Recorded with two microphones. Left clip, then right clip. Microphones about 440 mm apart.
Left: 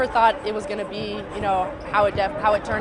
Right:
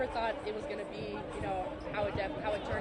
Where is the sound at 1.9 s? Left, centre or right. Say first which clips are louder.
Left 16 dB; left.